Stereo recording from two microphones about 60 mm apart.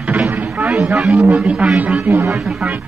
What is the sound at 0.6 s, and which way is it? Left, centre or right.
Speech, centre.